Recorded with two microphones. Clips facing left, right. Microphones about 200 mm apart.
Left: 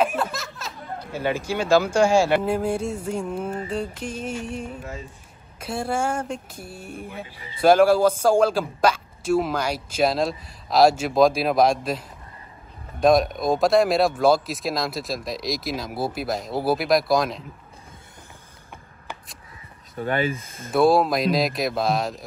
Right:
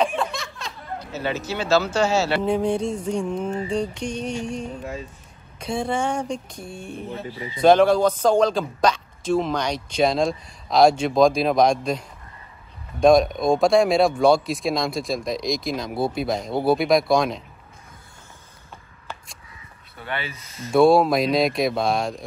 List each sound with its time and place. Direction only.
0.0 s speech: 5° left (ahead or behind)
20.0 s speech: 45° left (ahead or behind)
20.7 s speech: centre (ahead or behind)